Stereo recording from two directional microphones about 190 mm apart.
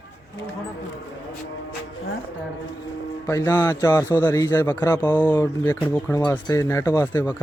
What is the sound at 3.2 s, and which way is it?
Speech, 15° left (ahead or behind).